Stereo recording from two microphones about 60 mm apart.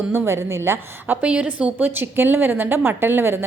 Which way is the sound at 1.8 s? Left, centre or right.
Right.